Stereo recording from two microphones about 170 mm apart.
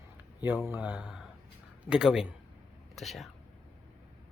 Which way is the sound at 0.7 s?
10° right (ahead or behind).